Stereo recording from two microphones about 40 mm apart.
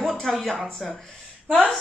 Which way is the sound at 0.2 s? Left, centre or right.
Centre.